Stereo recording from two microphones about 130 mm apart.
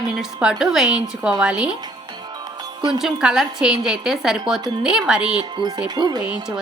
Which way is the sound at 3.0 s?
5° right (ahead or behind).